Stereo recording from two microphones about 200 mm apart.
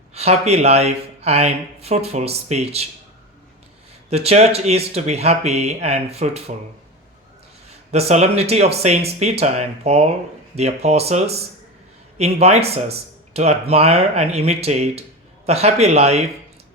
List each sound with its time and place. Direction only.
0.1 s speech: 30° right (ahead or behind)
4.1 s speech: 30° right (ahead or behind)
7.9 s speech: 30° right (ahead or behind)